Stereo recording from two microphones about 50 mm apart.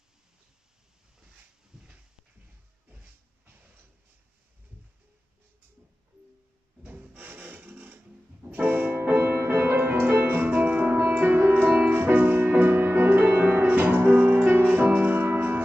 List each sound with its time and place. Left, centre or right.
1.7 s a sound: centre
6.8 s wood: right
8.5 s music: right
9.0 s music: right